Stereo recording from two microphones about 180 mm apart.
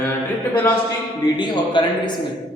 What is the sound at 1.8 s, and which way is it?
Speech, 25° left (ahead or behind).